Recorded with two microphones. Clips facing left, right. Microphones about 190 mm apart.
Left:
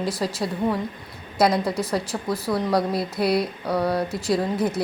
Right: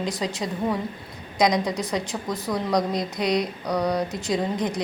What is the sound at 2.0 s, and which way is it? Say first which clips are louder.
A woman's voice: left 2 dB; 5° left (ahead or behind).